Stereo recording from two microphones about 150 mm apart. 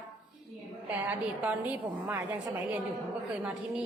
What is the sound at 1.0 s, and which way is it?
A woman's voice, 10° right (ahead or behind).